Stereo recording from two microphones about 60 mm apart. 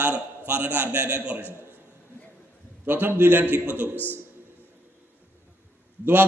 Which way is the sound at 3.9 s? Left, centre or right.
Left.